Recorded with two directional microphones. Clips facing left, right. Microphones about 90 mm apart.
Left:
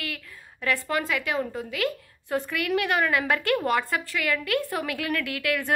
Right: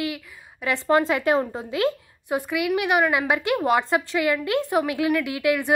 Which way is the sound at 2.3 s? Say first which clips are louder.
Right 3 dB; 15° right (ahead or behind).